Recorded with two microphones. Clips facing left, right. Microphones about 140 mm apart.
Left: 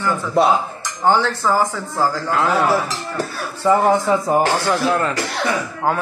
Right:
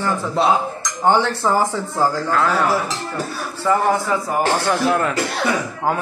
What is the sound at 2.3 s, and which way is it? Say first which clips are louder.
Speech: even; 10° left (ahead or behind).